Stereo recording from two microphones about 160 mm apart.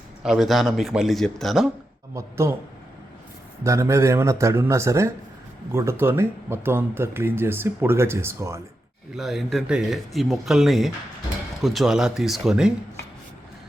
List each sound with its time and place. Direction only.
0.2 s speech: centre (ahead or behind)
2.1 s speech: 15° right (ahead or behind)
3.6 s speech: 20° right (ahead or behind)
9.1 s speech: centre (ahead or behind)